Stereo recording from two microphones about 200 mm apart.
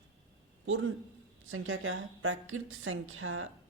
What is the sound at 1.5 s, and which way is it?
A woman's voice, 85° right.